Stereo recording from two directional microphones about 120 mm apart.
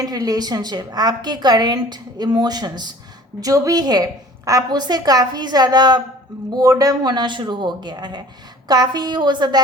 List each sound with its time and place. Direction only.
0.0 s a woman's voice: 30° right (ahead or behind)